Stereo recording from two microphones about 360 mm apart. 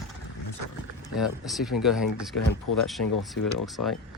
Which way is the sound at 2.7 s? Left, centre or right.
Left.